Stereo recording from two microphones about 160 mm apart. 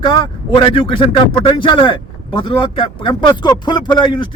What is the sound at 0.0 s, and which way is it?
Speech, 25° left (ahead or behind).